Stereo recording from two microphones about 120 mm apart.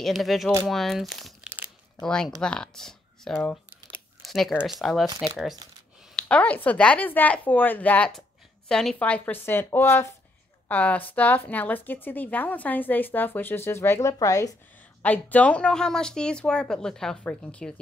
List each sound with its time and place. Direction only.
0.0 s speech: centre (ahead or behind)
6.1 s a woman's voice: 10° left (ahead or behind); by 14.5 s 30° left (ahead or behind)
15.0 s a woman's voice: 15° left (ahead or behind)